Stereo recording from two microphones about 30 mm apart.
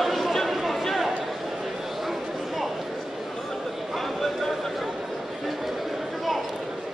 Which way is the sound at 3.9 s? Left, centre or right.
Centre.